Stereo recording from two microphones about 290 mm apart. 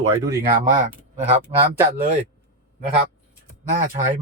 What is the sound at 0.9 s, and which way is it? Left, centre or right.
Speech, right.